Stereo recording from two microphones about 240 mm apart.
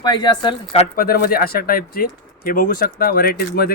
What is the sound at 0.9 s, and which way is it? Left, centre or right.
Speech, left.